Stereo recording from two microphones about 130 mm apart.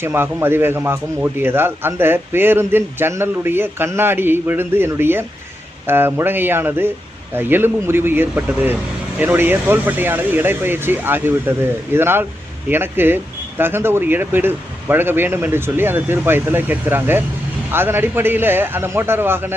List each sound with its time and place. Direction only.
0.0 s a man's voice: 20° right (ahead or behind)